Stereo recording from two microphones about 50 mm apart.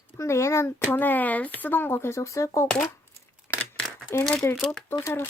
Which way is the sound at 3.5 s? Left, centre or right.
Left.